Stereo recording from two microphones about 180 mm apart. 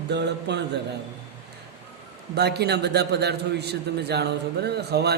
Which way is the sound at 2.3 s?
65° right (ahead or behind).